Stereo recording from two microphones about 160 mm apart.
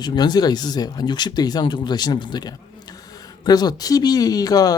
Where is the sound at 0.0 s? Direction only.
25° left (ahead or behind).